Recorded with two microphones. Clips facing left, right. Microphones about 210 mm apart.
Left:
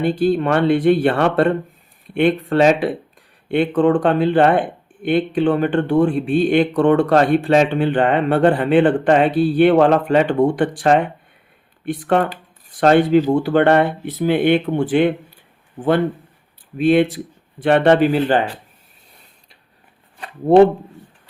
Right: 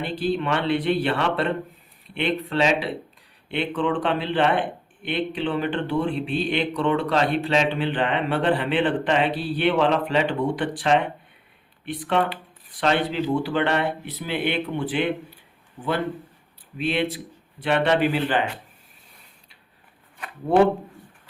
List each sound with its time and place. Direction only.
0.0 s a man's voice: 45° left (ahead or behind)
16.7 s a man's voice: 45° left (ahead or behind)